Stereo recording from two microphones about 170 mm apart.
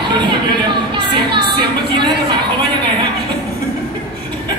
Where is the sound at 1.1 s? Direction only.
25° right (ahead or behind).